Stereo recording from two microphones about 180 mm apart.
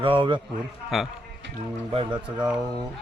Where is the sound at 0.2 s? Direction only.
25° right (ahead or behind).